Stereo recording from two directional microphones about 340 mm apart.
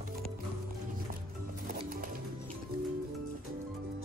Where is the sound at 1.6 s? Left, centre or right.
Right.